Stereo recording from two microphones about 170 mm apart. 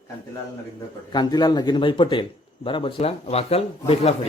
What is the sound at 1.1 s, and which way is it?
Speech, 25° left (ahead or behind).